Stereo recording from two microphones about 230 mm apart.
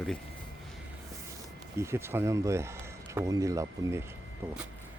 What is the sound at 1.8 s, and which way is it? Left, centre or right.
Speech, centre.